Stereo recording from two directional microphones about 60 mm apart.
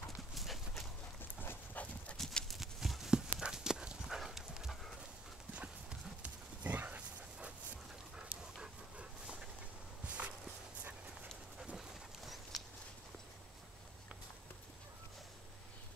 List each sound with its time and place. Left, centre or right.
0.3 s clip-clop: centre
1.4 s dog: left
2.4 s dog: centre
5.5 s clip-clop: right
10.0 s walk: right
11.7 s a sound: centre